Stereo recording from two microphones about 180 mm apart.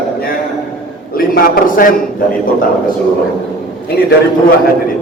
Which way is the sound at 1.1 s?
55° left (ahead or behind).